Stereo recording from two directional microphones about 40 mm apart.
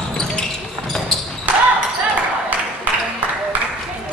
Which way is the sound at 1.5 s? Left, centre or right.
Right.